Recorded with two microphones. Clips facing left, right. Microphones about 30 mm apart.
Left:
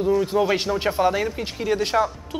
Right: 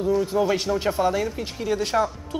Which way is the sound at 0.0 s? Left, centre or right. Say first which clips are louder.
Left 2 dB; centre.